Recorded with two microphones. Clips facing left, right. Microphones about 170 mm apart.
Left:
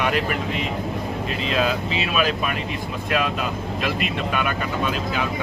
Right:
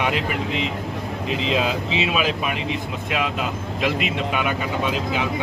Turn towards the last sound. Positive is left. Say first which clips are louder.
# right 1 dB
turn(degrees=-20)  # may be behind; listen again after turning